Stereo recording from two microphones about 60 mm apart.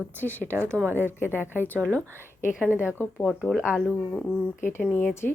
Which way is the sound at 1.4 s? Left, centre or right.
Left.